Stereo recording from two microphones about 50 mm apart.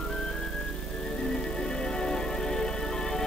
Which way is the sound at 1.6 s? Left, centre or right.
Centre.